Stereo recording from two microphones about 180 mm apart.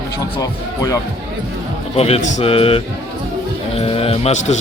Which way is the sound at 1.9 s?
35° left (ahead or behind).